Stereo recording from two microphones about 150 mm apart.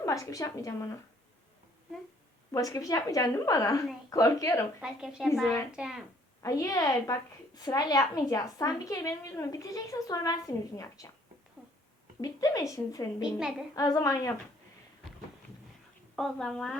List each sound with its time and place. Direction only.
0.0 s a woman's voice: 25° left (ahead or behind)
2.5 s a woman's voice: 20° left (ahead or behind)
4.8 s a woman's voice: 5° right (ahead or behind)
6.4 s a woman's voice: 20° left (ahead or behind)
12.2 s a woman's voice: 20° left (ahead or behind)
13.2 s a woman's voice: 5° right (ahead or behind)
13.7 s a woman's voice: 25° left (ahead or behind)
16.1 s a woman's voice: 5° left (ahead or behind)